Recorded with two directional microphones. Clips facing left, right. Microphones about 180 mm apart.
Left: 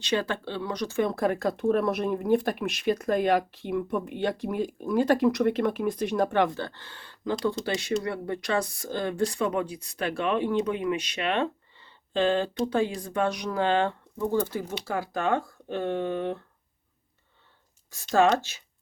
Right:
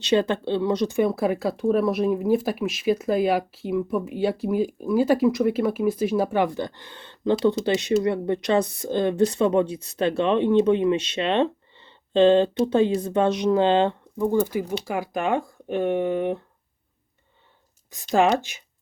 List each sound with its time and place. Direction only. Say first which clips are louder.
0.0 s speech: right 7 dB; 20° right (ahead or behind)
18.1 s speech: right 2 dB; 15° right (ahead or behind)